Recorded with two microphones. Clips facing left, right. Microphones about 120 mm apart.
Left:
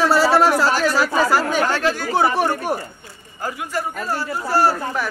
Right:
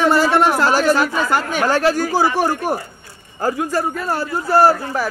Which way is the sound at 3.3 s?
35° right (ahead or behind).